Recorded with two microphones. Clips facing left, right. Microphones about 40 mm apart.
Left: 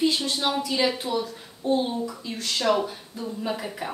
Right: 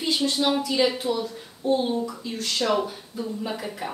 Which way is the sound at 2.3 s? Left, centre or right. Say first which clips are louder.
Left 1 dB; centre.